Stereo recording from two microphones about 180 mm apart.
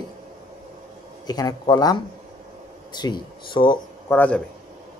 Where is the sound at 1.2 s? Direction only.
20° left (ahead or behind).